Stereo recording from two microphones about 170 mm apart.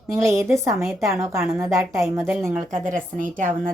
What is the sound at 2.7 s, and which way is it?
Speech, 50° right (ahead or behind).